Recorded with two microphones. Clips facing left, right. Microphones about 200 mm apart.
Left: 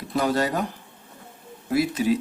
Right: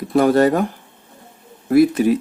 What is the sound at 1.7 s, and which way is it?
Speech, 55° right (ahead or behind).